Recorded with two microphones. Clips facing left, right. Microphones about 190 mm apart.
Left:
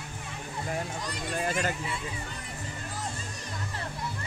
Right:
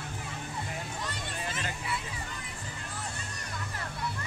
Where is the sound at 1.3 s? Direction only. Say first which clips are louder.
Left 10 dB; 50° left (ahead or behind).